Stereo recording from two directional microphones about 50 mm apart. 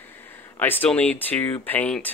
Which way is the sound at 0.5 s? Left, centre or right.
Left.